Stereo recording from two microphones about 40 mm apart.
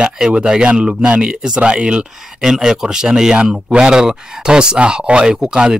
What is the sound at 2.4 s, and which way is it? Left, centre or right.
Speech, centre.